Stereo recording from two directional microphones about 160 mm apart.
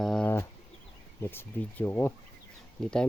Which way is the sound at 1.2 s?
15° left (ahead or behind).